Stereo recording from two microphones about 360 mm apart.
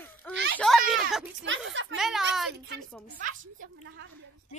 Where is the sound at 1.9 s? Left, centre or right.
Centre.